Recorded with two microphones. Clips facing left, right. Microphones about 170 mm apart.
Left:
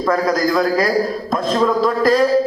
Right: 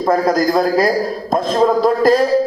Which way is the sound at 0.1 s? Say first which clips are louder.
Right 3 dB; 40° right (ahead or behind).